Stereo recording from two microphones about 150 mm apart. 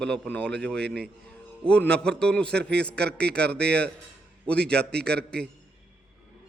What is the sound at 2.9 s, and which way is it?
Speech, 90° right.